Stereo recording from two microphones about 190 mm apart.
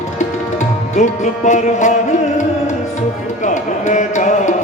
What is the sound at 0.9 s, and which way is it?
Music, 40° left (ahead or behind).